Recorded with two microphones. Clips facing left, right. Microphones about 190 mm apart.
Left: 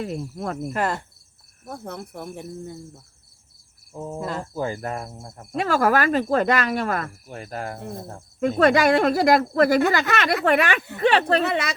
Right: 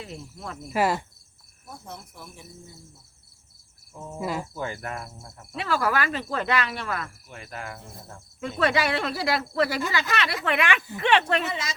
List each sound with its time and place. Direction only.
0.0 s cricket: 50° left (ahead or behind)
0.7 s insect: 5° right (ahead or behind)
1.6 s cricket: 60° left (ahead or behind)
3.9 s cricket: 35° left (ahead or behind)
4.2 s insect: 10° right (ahead or behind)
4.5 s cricket: 35° left (ahead or behind)
11.4 s cricket: 65° left (ahead or behind)